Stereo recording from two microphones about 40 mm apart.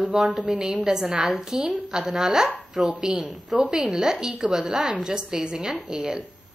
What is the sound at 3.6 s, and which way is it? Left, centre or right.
A woman's voice, centre.